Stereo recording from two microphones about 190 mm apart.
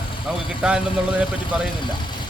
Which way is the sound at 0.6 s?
5° right (ahead or behind).